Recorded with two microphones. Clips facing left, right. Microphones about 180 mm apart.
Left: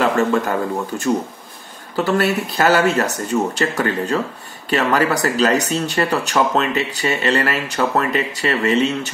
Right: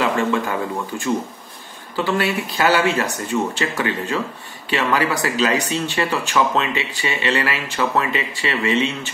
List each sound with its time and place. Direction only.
0.0 s speech: 40° left (ahead or behind)